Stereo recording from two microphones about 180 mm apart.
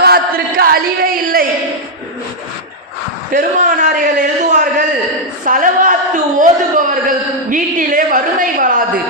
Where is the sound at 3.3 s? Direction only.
45° right (ahead or behind).